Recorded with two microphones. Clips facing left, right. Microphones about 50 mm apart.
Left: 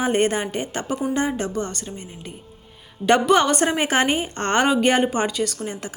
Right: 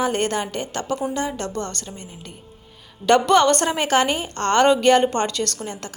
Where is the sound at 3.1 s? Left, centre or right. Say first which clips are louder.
Right 1 dB; centre.